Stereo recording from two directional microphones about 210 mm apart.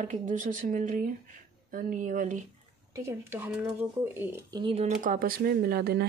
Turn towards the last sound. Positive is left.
turn(degrees=-50)  # may be behind; listen again after turning